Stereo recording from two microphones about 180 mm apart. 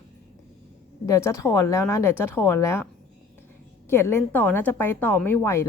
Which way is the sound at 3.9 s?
15° left (ahead or behind).